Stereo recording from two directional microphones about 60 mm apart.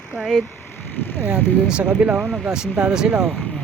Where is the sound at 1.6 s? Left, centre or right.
Centre.